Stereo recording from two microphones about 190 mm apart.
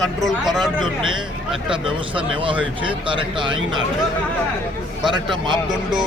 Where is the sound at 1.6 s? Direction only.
25° right (ahead or behind).